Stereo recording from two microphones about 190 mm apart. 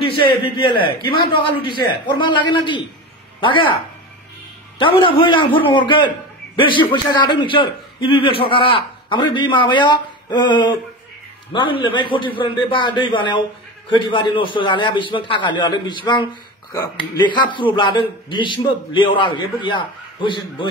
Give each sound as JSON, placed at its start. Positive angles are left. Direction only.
{"t": 0.2, "sound": "a man's voice", "side_deg": 25}
{"t": 4.7, "sound": "a man's voice", "side_deg": 25}